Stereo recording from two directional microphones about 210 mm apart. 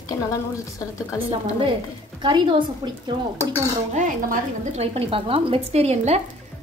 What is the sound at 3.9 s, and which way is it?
A woman's voice, 35° right (ahead or behind).